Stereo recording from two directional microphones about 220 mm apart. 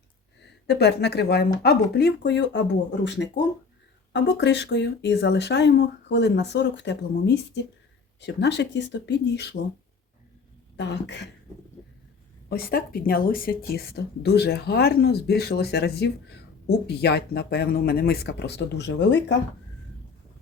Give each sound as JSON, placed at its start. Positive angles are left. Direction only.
{"t": 0.7, "sound": "speech", "side_deg": 50}
{"t": 10.8, "sound": "speech", "side_deg": 50}
{"t": 12.5, "sound": "speech", "side_deg": 45}